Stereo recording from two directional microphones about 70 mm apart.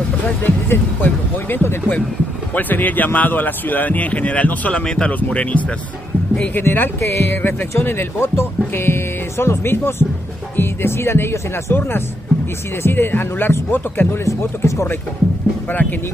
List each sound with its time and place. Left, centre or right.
0.4 s speech: left
15.7 s speech: left